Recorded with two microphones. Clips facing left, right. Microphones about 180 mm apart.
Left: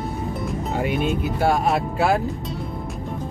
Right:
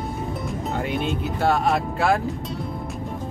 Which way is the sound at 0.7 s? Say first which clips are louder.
Left 3 dB; 5° left (ahead or behind).